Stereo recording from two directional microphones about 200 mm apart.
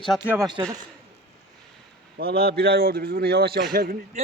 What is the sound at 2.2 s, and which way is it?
A man's voice, 50° right (ahead or behind).